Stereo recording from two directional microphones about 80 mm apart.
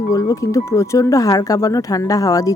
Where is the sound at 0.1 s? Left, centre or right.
Left.